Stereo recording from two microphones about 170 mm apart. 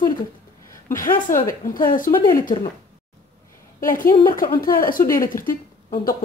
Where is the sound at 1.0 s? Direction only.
50° left (ahead or behind).